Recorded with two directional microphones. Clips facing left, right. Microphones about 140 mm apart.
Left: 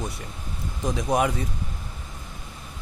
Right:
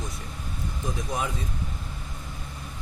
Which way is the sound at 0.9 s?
80° left.